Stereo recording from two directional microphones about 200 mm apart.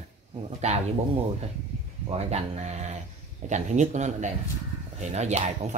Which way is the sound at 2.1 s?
30° right (ahead or behind).